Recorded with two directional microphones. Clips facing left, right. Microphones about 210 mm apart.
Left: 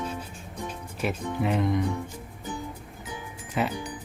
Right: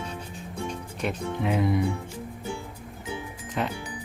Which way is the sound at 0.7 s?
Centre (ahead or behind).